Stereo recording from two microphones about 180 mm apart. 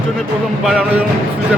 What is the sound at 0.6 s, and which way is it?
Speech, 5° right (ahead or behind).